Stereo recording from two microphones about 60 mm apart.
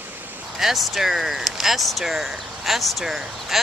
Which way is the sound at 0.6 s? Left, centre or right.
Centre.